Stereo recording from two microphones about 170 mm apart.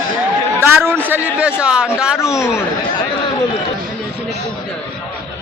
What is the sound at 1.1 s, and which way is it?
A man's voice, 5° right (ahead or behind).